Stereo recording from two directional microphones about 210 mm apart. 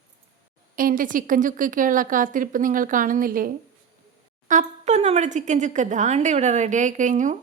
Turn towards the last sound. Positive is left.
turn(degrees=-35)  # may be behind; listen again after turning